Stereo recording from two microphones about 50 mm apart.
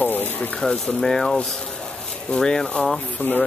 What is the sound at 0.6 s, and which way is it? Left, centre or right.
Speech, centre.